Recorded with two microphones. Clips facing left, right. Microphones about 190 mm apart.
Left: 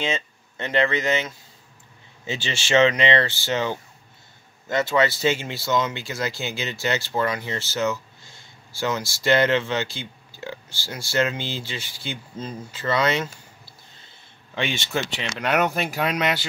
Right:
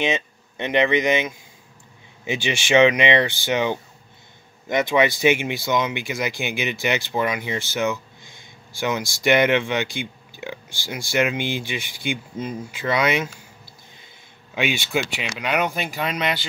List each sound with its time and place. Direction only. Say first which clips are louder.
0.0 s speech: right 4 dB; 20° right (ahead or behind)
13.9 s a sound: right 3 dB; 10° right (ahead or behind)
15.2 s speech: left 1 dB; centre (ahead or behind)